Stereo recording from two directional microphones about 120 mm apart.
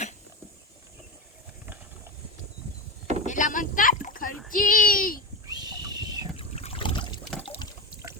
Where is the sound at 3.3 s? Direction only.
90° left.